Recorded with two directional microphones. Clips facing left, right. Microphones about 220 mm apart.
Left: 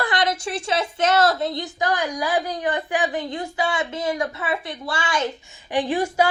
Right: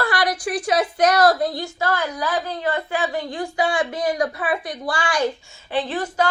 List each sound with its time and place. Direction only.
0.0 s a woman's voice: 20° left (ahead or behind)